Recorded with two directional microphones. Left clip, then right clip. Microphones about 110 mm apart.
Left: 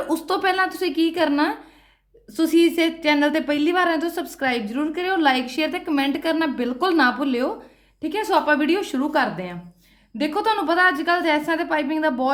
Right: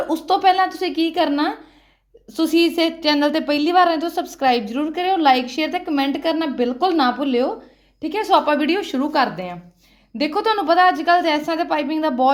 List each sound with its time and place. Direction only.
0.1 s a woman's voice: 15° right (ahead or behind)
2.3 s a woman's voice: 30° right (ahead or behind)
8.0 s a woman's voice: 25° right (ahead or behind)